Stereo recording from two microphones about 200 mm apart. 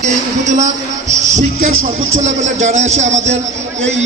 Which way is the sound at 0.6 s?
35° right (ahead or behind).